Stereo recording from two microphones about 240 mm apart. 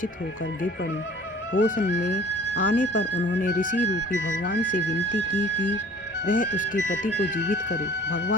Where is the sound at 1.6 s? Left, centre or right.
Left.